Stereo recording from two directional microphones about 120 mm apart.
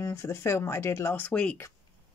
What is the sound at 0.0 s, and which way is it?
Speech, 25° left (ahead or behind).